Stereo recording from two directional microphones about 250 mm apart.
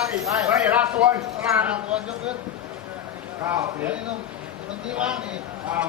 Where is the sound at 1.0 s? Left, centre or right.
Centre.